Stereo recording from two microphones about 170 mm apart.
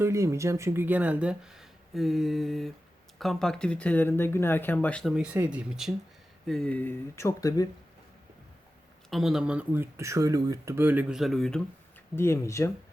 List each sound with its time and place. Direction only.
0.0 s speech: 15° right (ahead or behind); by 5.1 s 5° left (ahead or behind)
5.1 s speech: 5° right (ahead or behind)
6.5 s speech: 5° left (ahead or behind); by 7.7 s 20° left (ahead or behind)
9.0 s speech: centre (ahead or behind)
12.1 s speech: 15° left (ahead or behind)